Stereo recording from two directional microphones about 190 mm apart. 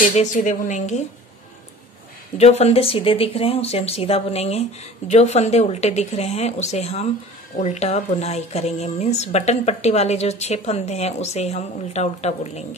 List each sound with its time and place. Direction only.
0.0 s speech: 40° left (ahead or behind)
2.3 s speech: 35° left (ahead or behind)